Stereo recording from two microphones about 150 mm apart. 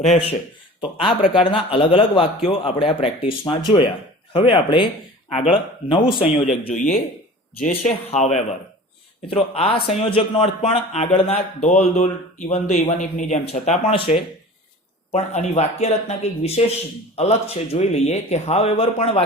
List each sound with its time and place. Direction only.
0.0 s speech: 45° left (ahead or behind)
0.8 s a man's voice: 35° left (ahead or behind)
6.5 s speech: 55° left (ahead or behind)
9.3 s a man's voice: 40° left (ahead or behind)
13.4 s a man's voice: 40° left (ahead or behind)
15.1 s speech: 45° left (ahead or behind)